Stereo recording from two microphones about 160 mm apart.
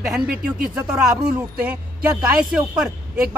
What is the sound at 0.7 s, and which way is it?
Speech, 5° right (ahead or behind).